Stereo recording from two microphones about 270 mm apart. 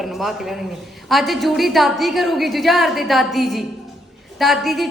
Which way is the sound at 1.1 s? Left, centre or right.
Centre.